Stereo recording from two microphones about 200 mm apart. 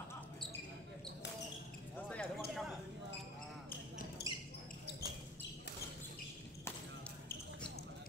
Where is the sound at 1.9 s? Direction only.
5° left (ahead or behind).